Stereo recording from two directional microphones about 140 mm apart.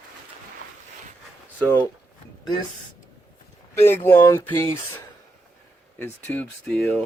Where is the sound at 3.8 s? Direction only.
15° left (ahead or behind).